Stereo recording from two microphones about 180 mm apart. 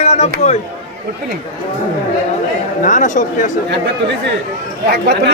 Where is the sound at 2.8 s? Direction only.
45° left (ahead or behind).